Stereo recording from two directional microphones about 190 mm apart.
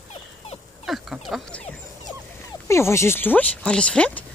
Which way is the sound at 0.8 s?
Centre (ahead or behind).